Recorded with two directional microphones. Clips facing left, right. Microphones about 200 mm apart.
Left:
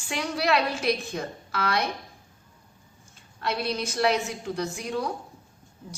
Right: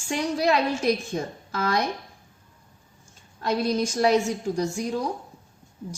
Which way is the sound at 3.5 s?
40° right (ahead or behind).